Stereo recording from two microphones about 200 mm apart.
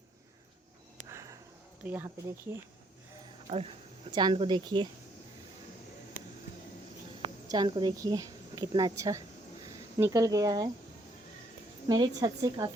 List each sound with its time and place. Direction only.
1.1 s a sound: 15° right (ahead or behind)
1.8 s a woman's voice: 10° right (ahead or behind)
3.5 s speech: 30° right (ahead or behind)
7.2 s speech: 20° right (ahead or behind)
11.9 s a woman's voice: 20° right (ahead or behind)